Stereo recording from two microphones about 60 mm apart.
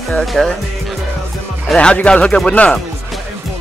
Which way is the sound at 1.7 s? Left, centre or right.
Centre.